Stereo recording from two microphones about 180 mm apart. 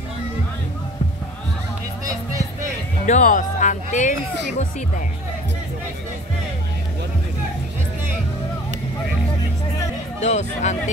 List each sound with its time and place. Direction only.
2.0 s music: 20° right (ahead or behind)
3.1 s speech: 45° left (ahead or behind)
10.2 s speech: 40° left (ahead or behind)